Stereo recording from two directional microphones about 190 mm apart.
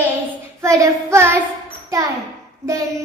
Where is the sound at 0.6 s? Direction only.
15° right (ahead or behind).